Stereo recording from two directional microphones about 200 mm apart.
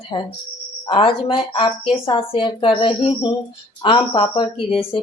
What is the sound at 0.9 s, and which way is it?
Speech, 25° left (ahead or behind).